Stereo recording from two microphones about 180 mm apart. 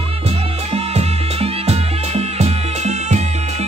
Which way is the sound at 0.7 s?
35° right (ahead or behind).